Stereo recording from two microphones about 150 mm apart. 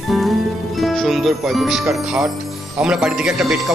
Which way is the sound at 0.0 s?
Centre (ahead or behind).